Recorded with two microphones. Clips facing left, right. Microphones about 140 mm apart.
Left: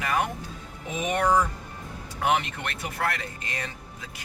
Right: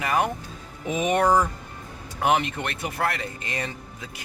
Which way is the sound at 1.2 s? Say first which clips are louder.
Right 1 dB; 35° right (ahead or behind).